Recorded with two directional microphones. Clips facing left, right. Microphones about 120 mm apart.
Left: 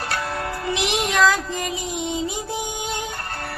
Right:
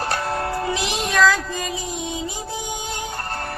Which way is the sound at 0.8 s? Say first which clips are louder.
Left 1 dB; 20° left (ahead or behind).